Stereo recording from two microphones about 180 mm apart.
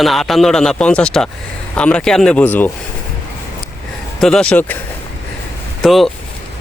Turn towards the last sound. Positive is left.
turn(degrees=0)  # may be behind; listen again after turning